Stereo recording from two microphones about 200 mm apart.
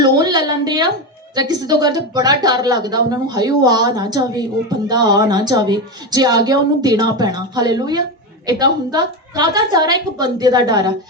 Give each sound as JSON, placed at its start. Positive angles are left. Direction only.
{"t": 0.0, "sound": "a woman's voice", "side_deg": -20}